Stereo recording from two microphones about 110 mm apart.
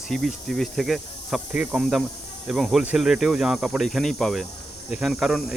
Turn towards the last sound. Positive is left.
turn(degrees=0)  # may be behind; listen again after turning